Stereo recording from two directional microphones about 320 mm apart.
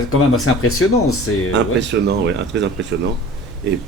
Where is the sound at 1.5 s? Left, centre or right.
Right.